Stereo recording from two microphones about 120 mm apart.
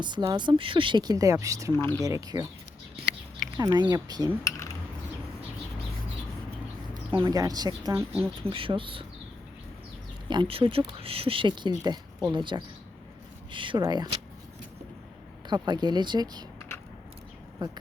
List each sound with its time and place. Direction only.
0.0 s speech: 40° right (ahead or behind)
1.7 s speech: 20° left (ahead or behind)
2.0 s speech: 30° right (ahead or behind)
3.6 s speech: 35° right (ahead or behind)
6.9 s speech: 40° right (ahead or behind)
8.4 s speech: 50° right (ahead or behind)
10.2 s speech: 45° right (ahead or behind)
15.4 s speech: 35° right (ahead or behind)